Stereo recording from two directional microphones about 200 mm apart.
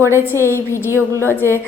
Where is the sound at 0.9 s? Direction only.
15° right (ahead or behind).